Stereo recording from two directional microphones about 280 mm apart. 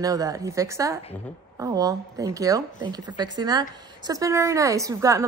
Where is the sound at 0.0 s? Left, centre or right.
Centre.